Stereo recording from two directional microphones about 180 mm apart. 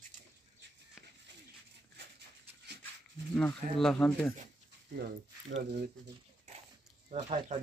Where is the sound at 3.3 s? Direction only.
5° left (ahead or behind).